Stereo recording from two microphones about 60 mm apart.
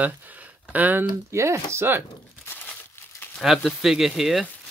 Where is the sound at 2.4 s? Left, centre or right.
Left.